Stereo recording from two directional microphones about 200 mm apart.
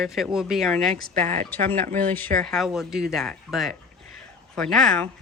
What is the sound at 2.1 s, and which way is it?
Speech, 10° left (ahead or behind).